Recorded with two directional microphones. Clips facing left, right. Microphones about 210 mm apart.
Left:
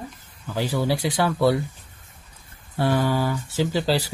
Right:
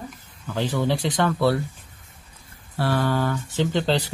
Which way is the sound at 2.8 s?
15° left (ahead or behind).